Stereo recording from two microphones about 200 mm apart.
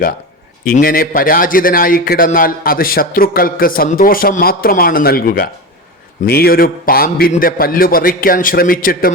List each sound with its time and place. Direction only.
0.6 s a man's voice: 45° left (ahead or behind)